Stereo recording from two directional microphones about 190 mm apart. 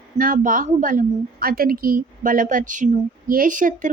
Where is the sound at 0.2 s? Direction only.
45° right (ahead or behind).